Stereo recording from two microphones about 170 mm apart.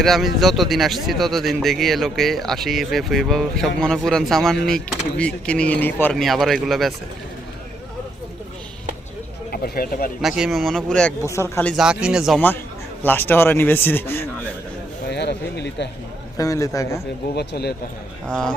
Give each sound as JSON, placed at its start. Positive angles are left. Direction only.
{"t": 0.0, "sound": "speech", "side_deg": 0}
{"t": 9.5, "sound": "speech", "side_deg": 65}
{"t": 10.2, "sound": "speech", "side_deg": -5}
{"t": 11.2, "sound": "speech", "side_deg": 15}
{"t": 11.7, "sound": "speech", "side_deg": -5}
{"t": 13.0, "sound": "speech", "side_deg": 10}
{"t": 15.0, "sound": "speech", "side_deg": 80}
{"t": 16.4, "sound": "a man's voice", "side_deg": 20}
{"t": 17.3, "sound": "speech", "side_deg": 70}